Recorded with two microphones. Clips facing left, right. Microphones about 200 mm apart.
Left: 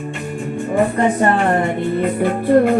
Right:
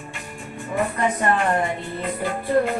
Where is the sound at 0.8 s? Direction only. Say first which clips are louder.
Left 7 dB; 35° left (ahead or behind).